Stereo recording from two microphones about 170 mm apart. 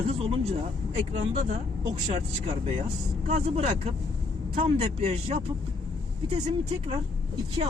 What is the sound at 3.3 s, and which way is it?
Speech, 40° right (ahead or behind).